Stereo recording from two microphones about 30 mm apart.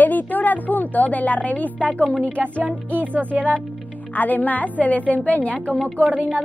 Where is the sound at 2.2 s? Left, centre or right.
Right.